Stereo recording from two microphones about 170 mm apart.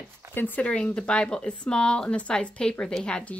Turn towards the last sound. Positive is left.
turn(degrees=5)  # may be behind; listen again after turning